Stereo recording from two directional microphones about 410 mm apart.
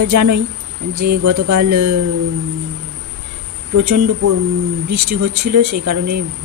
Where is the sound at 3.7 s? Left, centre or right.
Right.